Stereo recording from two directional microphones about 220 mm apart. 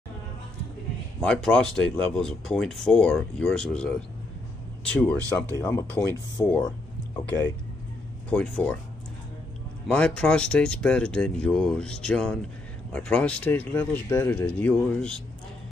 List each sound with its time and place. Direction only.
1.2 s speech: 5° left (ahead or behind)
8.3 s speech: 5° left (ahead or behind)
9.8 s speech: 5° left (ahead or behind)